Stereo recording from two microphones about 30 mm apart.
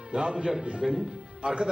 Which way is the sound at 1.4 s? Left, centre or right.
Right.